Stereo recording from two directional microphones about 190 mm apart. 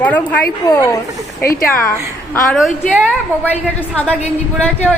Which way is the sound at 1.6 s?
50° left (ahead or behind).